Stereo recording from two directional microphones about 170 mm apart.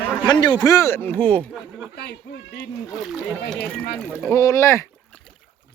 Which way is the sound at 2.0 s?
75° left (ahead or behind).